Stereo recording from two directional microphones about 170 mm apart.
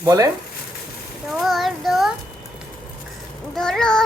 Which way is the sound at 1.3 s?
Centre (ahead or behind).